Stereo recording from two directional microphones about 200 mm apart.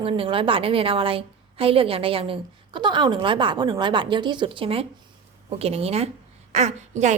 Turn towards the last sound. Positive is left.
turn(degrees=-35)  # may be behind; listen again after turning